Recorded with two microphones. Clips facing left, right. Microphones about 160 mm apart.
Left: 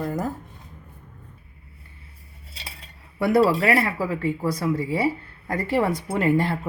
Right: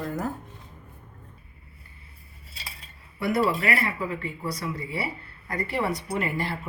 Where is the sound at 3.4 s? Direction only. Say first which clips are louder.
Left 6 dB; 90° left.